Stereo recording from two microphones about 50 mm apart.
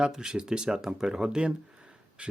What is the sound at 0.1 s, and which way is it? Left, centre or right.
Speech, centre.